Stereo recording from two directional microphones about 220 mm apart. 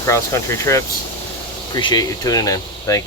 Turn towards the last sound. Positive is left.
turn(degrees=15)  # may be behind; listen again after turning